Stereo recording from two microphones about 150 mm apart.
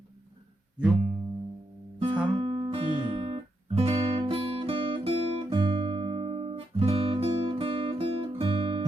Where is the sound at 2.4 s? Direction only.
35° right (ahead or behind).